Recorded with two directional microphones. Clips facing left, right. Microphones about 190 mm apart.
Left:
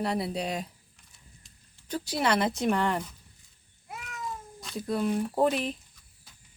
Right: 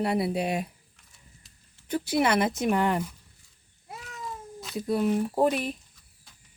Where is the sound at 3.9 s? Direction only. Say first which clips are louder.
Even; 30° right (ahead or behind).